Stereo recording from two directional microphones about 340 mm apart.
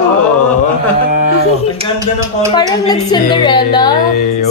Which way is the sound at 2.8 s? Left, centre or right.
Centre.